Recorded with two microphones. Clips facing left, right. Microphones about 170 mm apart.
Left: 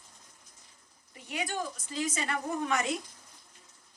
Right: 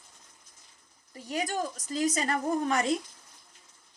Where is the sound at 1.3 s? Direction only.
40° right (ahead or behind).